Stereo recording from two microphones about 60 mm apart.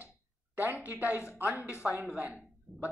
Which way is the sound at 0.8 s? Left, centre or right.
Right.